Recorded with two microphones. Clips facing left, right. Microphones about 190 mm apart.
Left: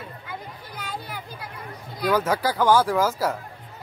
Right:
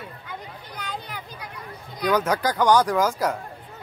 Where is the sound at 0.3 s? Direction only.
5° left (ahead or behind).